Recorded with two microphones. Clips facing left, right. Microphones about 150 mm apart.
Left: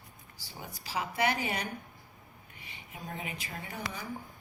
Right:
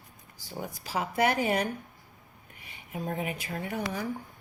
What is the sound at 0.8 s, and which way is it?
Speech, 50° right (ahead or behind).